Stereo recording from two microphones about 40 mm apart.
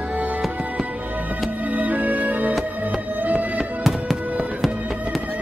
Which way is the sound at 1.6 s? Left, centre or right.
Right.